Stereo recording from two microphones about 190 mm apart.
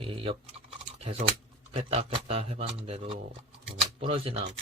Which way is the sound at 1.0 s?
30° right (ahead or behind).